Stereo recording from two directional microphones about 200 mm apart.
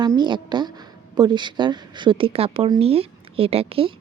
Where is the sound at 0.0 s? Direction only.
20° right (ahead or behind).